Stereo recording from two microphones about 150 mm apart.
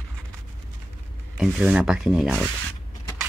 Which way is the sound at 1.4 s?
5° right (ahead or behind).